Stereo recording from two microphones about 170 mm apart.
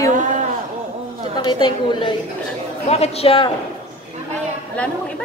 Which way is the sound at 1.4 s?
30° left (ahead or behind).